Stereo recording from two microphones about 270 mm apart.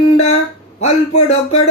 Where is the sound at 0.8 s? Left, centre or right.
Left.